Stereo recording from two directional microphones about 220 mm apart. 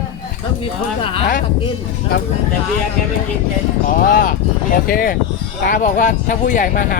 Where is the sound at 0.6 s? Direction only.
25° left (ahead or behind).